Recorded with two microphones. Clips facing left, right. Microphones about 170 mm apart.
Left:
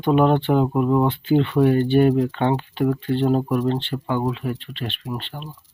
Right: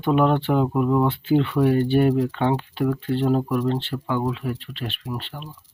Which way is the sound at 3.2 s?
15° left (ahead or behind).